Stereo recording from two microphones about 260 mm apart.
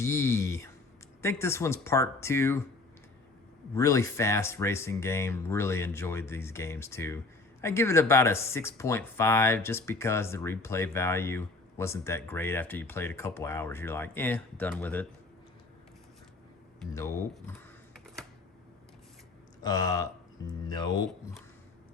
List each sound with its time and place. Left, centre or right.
0.0 s speech: centre
3.8 s speech: centre
16.8 s speech: centre
19.6 s speech: centre